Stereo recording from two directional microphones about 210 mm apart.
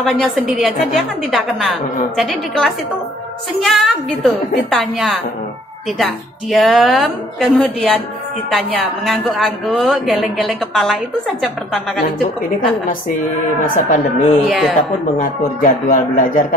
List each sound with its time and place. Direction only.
0.0 s speech: centre (ahead or behind)
13.7 s speech: 40° left (ahead or behind)
14.5 s speech: centre (ahead or behind)
15.1 s speech: 40° left (ahead or behind)